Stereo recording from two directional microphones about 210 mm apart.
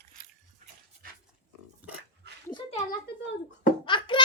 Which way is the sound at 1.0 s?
40° right (ahead or behind).